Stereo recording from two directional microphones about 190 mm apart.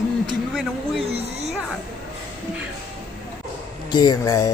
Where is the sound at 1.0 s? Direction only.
35° right (ahead or behind).